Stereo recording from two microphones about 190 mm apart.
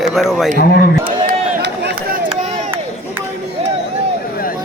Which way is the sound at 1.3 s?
60° right (ahead or behind).